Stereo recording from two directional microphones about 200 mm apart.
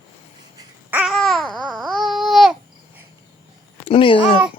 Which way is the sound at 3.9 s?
25° left (ahead or behind).